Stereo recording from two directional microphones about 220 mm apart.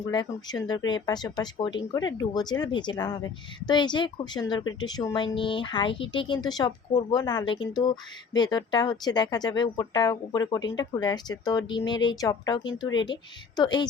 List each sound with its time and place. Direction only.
0.1 s speech: 20° left (ahead or behind)